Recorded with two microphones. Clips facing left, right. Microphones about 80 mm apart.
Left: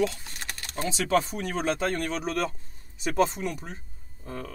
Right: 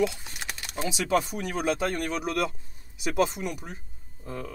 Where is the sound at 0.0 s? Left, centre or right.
Centre.